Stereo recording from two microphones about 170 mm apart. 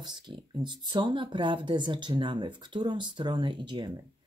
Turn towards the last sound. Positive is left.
turn(degrees=-25)  # may be behind; listen again after turning